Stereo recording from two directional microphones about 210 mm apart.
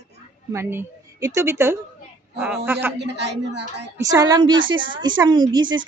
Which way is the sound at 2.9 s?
55° right (ahead or behind).